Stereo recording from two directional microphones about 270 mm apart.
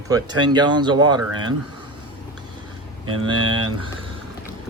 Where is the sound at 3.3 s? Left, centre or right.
Centre.